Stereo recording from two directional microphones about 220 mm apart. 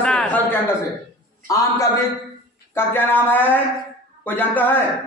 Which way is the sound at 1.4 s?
15° left (ahead or behind).